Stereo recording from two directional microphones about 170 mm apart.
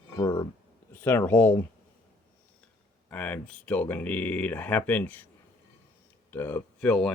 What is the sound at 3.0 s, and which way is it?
Speech, 10° left (ahead or behind).